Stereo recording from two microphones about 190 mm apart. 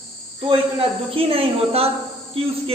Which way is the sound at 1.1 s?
30° right (ahead or behind).